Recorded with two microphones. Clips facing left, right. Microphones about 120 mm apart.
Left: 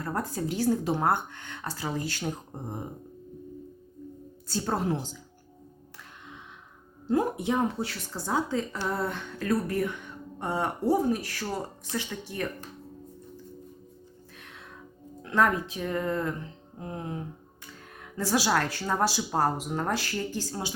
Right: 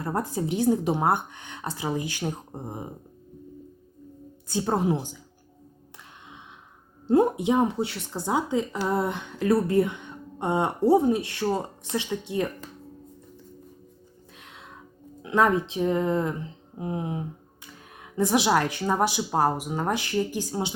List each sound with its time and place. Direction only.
0.0 s speech: 20° right (ahead or behind)
4.4 s speech: 20° right (ahead or behind)
7.1 s speech: 25° right (ahead or behind)
14.3 s music: 20° right (ahead or behind)
15.2 s speech: 20° right (ahead or behind)